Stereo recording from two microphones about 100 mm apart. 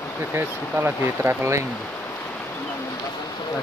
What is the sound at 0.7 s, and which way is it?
Speech, 25° right (ahead or behind).